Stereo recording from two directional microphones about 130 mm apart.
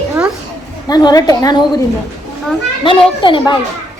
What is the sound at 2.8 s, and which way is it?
Speech, 40° left (ahead or behind).